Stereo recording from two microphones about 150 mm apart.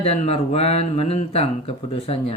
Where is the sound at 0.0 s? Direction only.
45° left (ahead or behind).